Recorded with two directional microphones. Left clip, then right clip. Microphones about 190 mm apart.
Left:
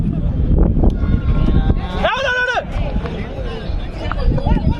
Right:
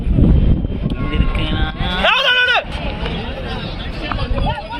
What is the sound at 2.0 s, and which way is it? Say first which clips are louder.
Sheep: right 3 dB; 70° left (ahead or behind).